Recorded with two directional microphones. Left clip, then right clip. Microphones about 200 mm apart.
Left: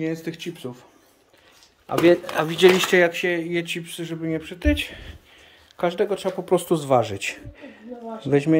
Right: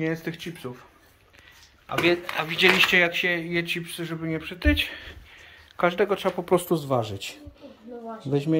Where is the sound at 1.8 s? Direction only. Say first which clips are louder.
Left 5 dB; 45° left (ahead or behind).